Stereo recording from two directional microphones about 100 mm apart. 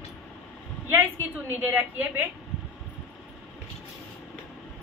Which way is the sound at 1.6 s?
20° right (ahead or behind).